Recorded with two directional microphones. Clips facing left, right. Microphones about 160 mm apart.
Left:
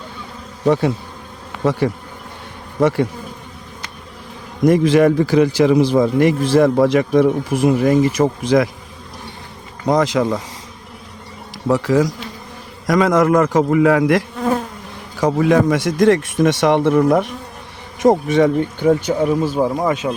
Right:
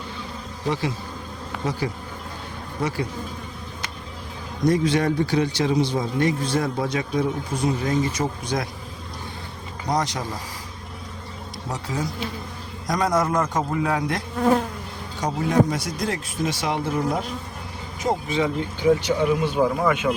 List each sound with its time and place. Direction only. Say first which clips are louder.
0.6 s bee: left 10 dB; 60° left (ahead or behind)
4.7 s a man's voice: left 9 dB; 90° left
10.2 s a man's voice: left 13 dB; 90° left
11.7 s a man's voice: left 14 dB; 90° left; by 17.2 s 70° left (ahead or behind)
18.0 s speech: left 10 dB; 80° left; by 20.1 s 35° left (ahead or behind)